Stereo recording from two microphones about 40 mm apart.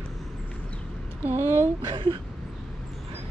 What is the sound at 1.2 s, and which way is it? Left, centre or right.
Speech, right.